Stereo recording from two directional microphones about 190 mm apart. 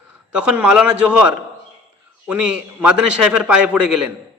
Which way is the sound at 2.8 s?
5° right (ahead or behind).